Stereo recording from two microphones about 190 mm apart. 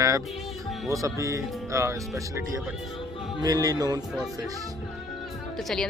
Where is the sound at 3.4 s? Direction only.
20° right (ahead or behind).